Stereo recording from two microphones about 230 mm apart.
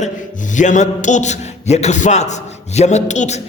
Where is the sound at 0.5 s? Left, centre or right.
Left.